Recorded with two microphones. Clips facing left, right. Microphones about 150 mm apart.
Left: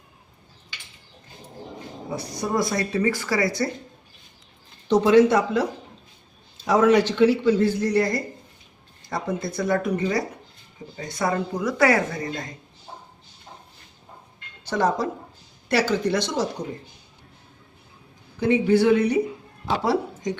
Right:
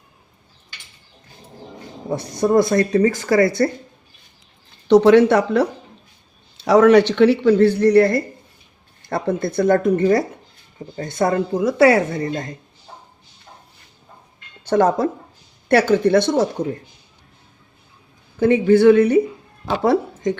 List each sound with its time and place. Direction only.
2.4 s speech: 55° right (ahead or behind)
4.9 s speech: 70° right (ahead or behind); by 11.4 s 50° right (ahead or behind)
11.5 s a woman's voice: 30° right (ahead or behind)
14.6 s speech: 50° right (ahead or behind)
18.3 s speech: 50° right (ahead or behind)